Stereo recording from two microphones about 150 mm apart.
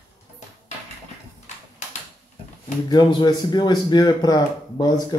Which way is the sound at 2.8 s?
30° left (ahead or behind).